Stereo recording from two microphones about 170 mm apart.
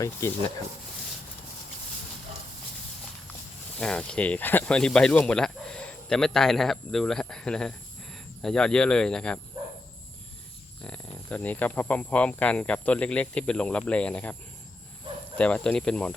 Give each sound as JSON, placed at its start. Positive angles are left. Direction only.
{"t": 0.0, "sound": "speech", "side_deg": 15}
{"t": 3.8, "sound": "speech", "side_deg": 5}
{"t": 10.8, "sound": "speech", "side_deg": 5}
{"t": 15.4, "sound": "speech", "side_deg": 5}